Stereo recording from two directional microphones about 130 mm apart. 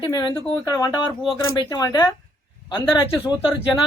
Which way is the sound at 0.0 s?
35° left (ahead or behind).